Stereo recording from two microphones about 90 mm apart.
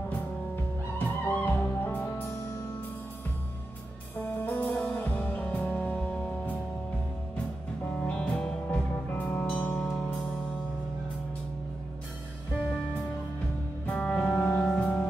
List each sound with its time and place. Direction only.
0.9 s music: 20° left (ahead or behind)
4.2 s music: 15° left (ahead or behind)
8.0 s music: 10° left (ahead or behind)
13.8 s music: 10° left (ahead or behind)